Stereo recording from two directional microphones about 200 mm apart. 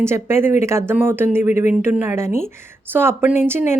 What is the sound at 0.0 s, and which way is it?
Speech, 10° right (ahead or behind).